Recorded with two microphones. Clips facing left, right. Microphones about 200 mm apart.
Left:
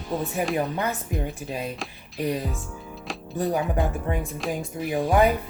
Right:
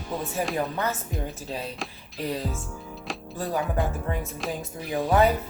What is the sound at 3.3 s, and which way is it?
Speech, 20° left (ahead or behind).